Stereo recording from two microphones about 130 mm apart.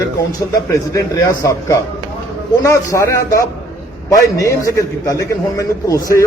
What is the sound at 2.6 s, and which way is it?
A man's voice, 25° left (ahead or behind).